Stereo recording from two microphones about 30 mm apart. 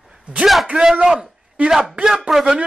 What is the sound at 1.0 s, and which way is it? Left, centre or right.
Speech, centre.